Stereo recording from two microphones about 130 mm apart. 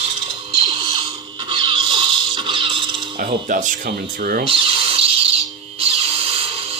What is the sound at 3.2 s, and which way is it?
Speech, 90° right.